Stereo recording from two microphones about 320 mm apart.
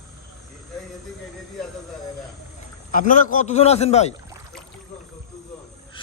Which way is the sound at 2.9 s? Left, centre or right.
Left.